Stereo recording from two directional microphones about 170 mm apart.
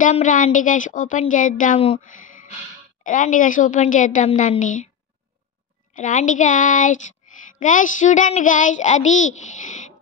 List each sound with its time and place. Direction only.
0.0 s a child's voice: 50° left (ahead or behind)
3.0 s a child's voice: 50° left (ahead or behind)
5.9 s a child's voice: 50° left (ahead or behind)